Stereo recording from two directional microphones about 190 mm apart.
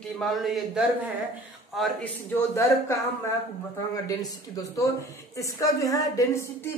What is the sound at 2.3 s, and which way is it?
Speech, 15° left (ahead or behind).